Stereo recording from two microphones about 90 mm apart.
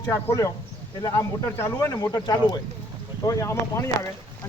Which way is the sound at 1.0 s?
35° left (ahead or behind).